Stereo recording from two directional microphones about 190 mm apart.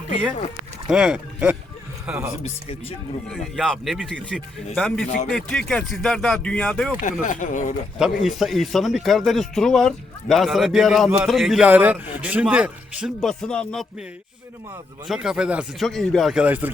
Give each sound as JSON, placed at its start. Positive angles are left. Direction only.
{"t": 0.9, "sound": "a man's voice", "side_deg": -5}
{"t": 7.0, "sound": "speech", "side_deg": 40}
{"t": 7.9, "sound": "a man's voice", "side_deg": 0}
{"t": 15.0, "sound": "a man's voice", "side_deg": 0}